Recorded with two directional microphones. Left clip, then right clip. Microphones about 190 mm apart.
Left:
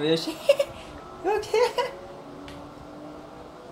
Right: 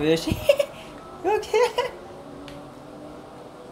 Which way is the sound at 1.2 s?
25° right (ahead or behind).